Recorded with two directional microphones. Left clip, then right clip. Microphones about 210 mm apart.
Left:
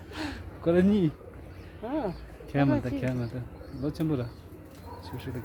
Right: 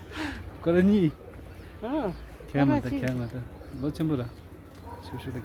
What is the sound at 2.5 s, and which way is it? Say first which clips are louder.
Speech: right 2 dB; 10° left (ahead or behind).